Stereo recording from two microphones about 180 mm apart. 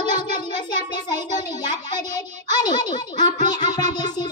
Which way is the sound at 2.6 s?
25° left (ahead or behind).